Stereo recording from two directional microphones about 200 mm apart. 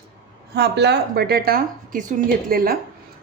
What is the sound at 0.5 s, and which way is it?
A woman's voice, 55° right (ahead or behind).